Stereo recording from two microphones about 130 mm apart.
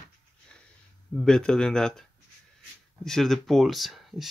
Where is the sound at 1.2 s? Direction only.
5° left (ahead or behind).